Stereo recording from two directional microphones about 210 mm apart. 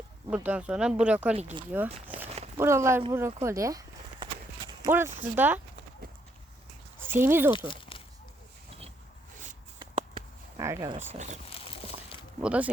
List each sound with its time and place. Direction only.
0.3 s speech: 5° right (ahead or behind)
1.4 s speech: 30° right (ahead or behind)
2.6 s speech: 15° right (ahead or behind)
3.4 s clip-clop: 15° right (ahead or behind)
4.9 s speech: 10° right (ahead or behind)
7.1 s speech: 10° right (ahead or behind)
7.7 s a sound: 25° left (ahead or behind)
9.7 s a sound: 20° right (ahead or behind)
10.6 s speech: 15° right (ahead or behind)
10.9 s speech: 35° right (ahead or behind)
11.4 s a sound: 25° left (ahead or behind)
12.4 s speech: 5° right (ahead or behind)